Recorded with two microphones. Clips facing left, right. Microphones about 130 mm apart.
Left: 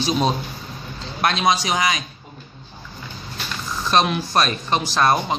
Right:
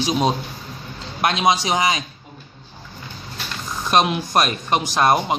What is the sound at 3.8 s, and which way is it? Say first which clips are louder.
Speech: right 1 dB; 15° right (ahead or behind).